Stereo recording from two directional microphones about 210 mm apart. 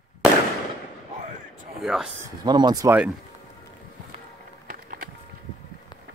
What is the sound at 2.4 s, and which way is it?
Speech, 20° right (ahead or behind).